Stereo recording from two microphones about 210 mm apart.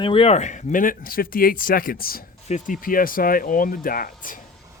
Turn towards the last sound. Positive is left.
turn(degrees=40)  # may be behind; listen again after turning